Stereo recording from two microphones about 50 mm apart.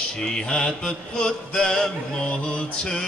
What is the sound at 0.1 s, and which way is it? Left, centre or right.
Mantra, centre.